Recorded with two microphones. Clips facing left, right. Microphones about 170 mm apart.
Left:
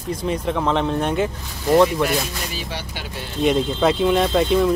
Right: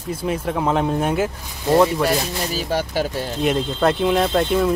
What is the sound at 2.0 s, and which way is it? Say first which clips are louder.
Speech: right 3 dB; 40° right (ahead or behind).